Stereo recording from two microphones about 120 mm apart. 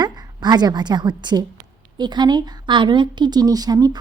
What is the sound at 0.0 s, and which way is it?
A woman's voice, 35° right (ahead or behind).